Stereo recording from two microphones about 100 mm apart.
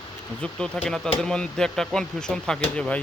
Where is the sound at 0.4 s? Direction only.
10° left (ahead or behind).